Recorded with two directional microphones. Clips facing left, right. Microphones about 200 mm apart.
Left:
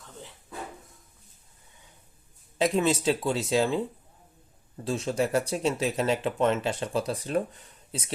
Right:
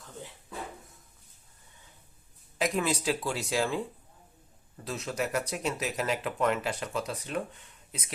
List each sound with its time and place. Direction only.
2.6 s speech: 25° left (ahead or behind)